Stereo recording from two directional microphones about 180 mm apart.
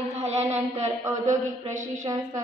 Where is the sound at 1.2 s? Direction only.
40° right (ahead or behind).